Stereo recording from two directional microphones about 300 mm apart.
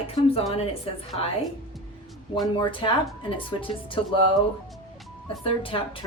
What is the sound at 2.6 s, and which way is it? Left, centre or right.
Speech, centre.